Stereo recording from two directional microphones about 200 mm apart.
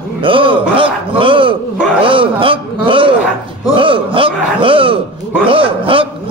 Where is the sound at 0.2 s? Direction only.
25° right (ahead or behind).